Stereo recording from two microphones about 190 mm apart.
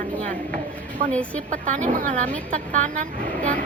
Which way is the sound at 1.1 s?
5° left (ahead or behind).